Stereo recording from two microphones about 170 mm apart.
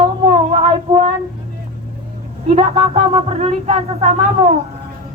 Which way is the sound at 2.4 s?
40° right (ahead or behind).